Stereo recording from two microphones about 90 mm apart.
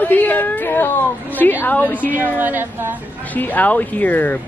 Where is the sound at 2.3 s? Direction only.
20° right (ahead or behind).